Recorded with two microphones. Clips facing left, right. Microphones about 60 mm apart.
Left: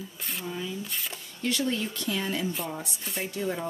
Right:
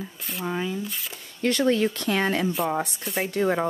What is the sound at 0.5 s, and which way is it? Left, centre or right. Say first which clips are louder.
Speech: right 7 dB; right.